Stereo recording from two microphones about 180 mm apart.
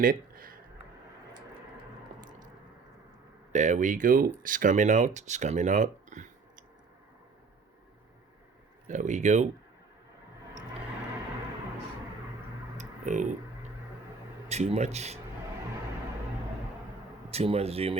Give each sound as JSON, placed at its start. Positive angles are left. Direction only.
{"t": 0.0, "sound": "a sound", "side_deg": -50}
{"t": 3.5, "sound": "speech", "side_deg": -40}
{"t": 8.9, "sound": "speech", "side_deg": -45}
{"t": 12.7, "sound": "tick-tock", "side_deg": -40}
{"t": 14.4, "sound": "speech", "side_deg": -35}
{"t": 17.3, "sound": "speech", "side_deg": -35}